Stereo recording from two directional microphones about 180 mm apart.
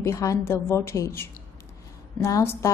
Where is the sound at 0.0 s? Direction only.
15° left (ahead or behind).